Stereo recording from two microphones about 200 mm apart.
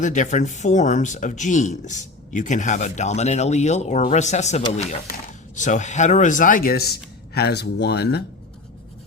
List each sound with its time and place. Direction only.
0.0 s speech: 40° left (ahead or behind); by 8.2 s 55° left (ahead or behind)